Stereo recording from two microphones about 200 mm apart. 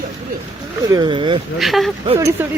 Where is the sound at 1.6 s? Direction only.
Centre (ahead or behind).